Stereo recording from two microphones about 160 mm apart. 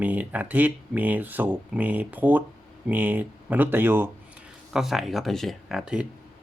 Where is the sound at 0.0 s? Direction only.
10° right (ahead or behind).